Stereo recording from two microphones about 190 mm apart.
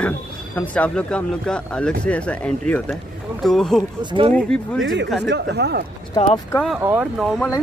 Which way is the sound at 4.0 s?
25° right (ahead or behind).